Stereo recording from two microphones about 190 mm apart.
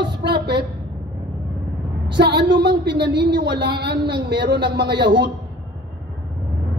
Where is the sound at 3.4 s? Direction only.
65° right (ahead or behind).